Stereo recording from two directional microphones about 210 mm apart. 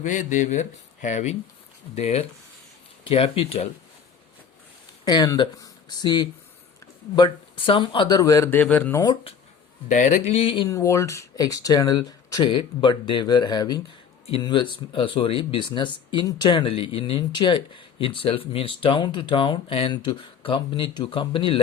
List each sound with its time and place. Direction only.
0.0 s speech: 35° left (ahead or behind)
5.0 s speech: 15° left (ahead or behind)
9.9 s speech: 35° left (ahead or behind)